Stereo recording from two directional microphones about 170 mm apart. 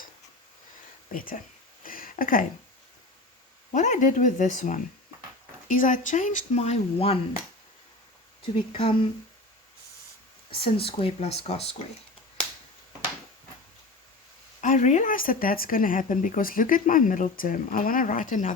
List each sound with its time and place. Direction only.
1.1 s speech: 55° left (ahead or behind)
1.8 s a sound: 55° left (ahead or behind)
3.7 s speech: 45° left (ahead or behind)
8.7 s speech: 30° left (ahead or behind)
10.6 s speech: 35° left (ahead or behind)
14.6 s speech: 45° left (ahead or behind)